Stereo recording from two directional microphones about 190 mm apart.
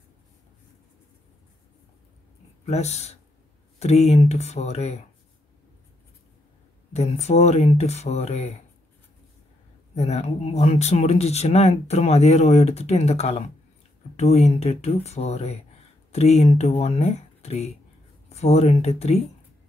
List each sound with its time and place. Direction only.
2.6 s speech: 35° left (ahead or behind)
6.9 s speech: 35° left (ahead or behind)
9.9 s speech: 35° left (ahead or behind)